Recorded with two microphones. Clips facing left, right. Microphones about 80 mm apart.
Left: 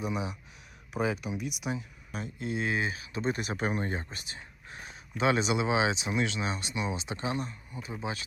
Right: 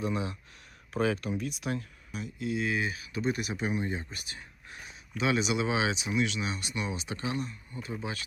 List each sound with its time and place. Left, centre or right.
0.0 s speech: centre
2.1 s speech: left
4.1 s whispering: left
4.9 s speech: left
7.7 s speech: centre